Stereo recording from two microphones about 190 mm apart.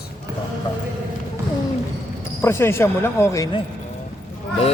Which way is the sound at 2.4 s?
15° left (ahead or behind).